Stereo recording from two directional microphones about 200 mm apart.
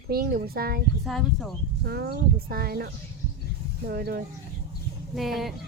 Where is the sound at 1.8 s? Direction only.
50° right (ahead or behind).